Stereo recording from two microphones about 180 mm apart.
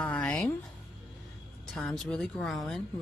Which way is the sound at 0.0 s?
5° left (ahead or behind).